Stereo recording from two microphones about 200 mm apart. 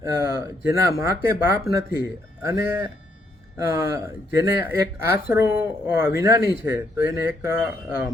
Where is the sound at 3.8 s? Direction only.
15° right (ahead or behind).